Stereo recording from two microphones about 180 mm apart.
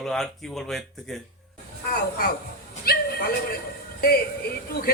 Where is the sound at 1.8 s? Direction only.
55° left (ahead or behind).